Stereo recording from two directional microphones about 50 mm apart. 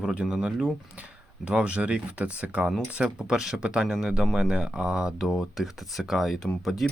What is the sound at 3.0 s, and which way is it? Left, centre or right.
Speech, centre.